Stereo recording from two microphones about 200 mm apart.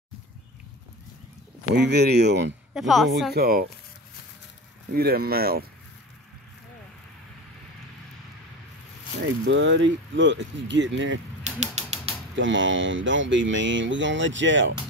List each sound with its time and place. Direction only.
1.8 s speech: 55° right (ahead or behind)
2.7 s speech: centre (ahead or behind)
3.3 s speech: 50° right (ahead or behind)
4.9 s speech: 50° right (ahead or behind)
9.5 s speech: 65° right (ahead or behind)
11.4 s music: 35° right (ahead or behind)
12.4 s speech: 70° right (ahead or behind)